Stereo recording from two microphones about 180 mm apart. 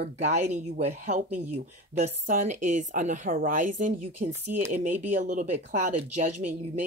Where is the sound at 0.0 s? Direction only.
40° right (ahead or behind).